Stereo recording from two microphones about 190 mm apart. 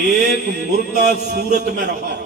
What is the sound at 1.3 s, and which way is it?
Speech, 55° right (ahead or behind).